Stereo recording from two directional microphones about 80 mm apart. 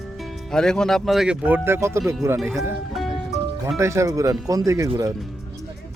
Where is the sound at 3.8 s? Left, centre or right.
Right.